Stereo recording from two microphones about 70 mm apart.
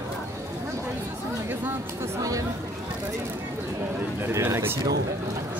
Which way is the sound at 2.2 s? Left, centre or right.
Right.